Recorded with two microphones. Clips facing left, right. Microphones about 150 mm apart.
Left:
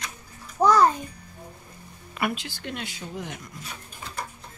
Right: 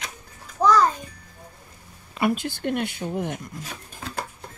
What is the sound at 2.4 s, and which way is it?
Speech, 55° right (ahead or behind).